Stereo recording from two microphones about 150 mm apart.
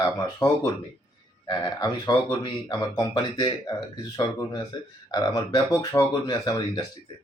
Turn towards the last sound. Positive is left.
turn(degrees=25)  # may be behind; listen again after turning